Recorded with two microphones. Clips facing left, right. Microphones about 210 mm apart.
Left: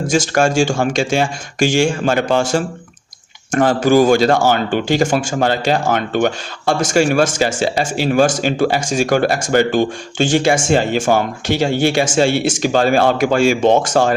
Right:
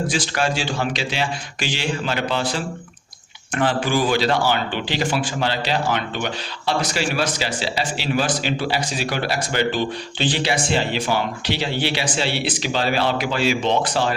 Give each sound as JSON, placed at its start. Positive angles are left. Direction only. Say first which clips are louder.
{"t": 0.1, "sound": "speech", "louder": "left 8 dB", "side_deg": 45}